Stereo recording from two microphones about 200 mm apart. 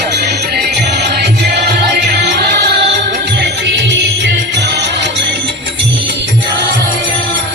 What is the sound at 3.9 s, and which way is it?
Music, 60° right (ahead or behind).